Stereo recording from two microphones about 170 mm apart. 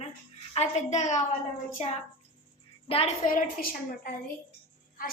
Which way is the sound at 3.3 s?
50° left (ahead or behind).